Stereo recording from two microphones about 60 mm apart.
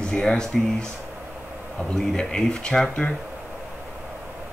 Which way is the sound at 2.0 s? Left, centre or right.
Centre.